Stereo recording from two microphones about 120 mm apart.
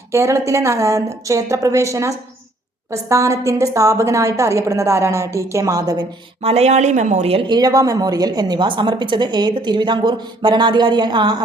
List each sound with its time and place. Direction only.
0.1 s a woman's voice: 25° right (ahead or behind)
6.4 s speech: 60° right (ahead or behind)
7.5 s a woman's voice: 30° right (ahead or behind)